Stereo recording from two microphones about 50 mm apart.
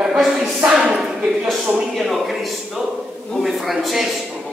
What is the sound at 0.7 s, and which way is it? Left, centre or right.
Speech, centre.